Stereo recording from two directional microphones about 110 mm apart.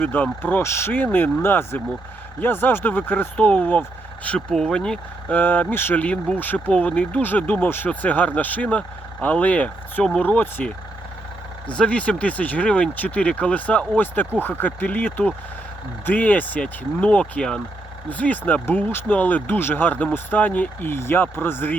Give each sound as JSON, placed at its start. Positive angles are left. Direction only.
{"t": 0.0, "sound": "speech", "side_deg": 15}
{"t": 11.8, "sound": "speech", "side_deg": 10}